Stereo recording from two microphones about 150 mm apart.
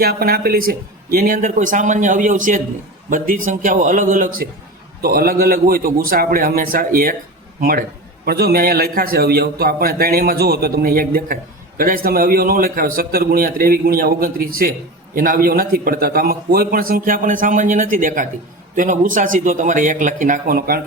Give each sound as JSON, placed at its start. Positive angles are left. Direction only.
{"t": 0.0, "sound": "speech", "side_deg": -85}
{"t": 5.0, "sound": "a man's voice", "side_deg": -80}